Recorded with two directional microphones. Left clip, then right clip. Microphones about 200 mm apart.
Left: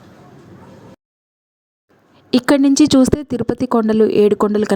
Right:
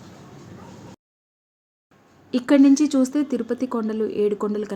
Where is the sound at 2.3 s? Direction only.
50° left (ahead or behind).